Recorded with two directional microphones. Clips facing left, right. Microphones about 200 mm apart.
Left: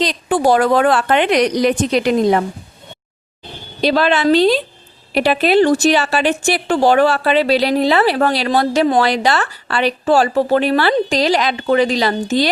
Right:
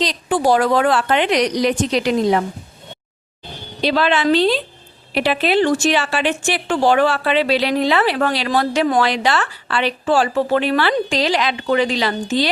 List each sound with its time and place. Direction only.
0.0 s a woman's voice: 55° left (ahead or behind)
3.8 s a woman's voice: 45° left (ahead or behind)